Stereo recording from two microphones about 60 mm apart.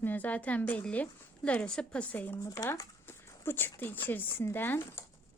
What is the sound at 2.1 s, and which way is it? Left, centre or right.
Speech, left.